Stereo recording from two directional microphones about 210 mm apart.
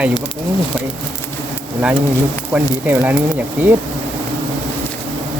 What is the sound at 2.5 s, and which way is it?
Speech, 10° right (ahead or behind).